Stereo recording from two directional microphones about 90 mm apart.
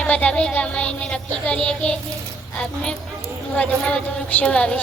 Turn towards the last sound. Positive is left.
turn(degrees=15)  # may be behind; listen again after turning